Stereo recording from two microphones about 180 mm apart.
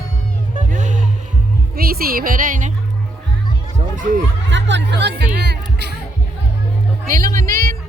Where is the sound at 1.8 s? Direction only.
55° right (ahead or behind).